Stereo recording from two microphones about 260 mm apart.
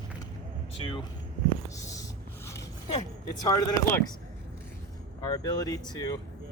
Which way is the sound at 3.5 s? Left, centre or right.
Centre.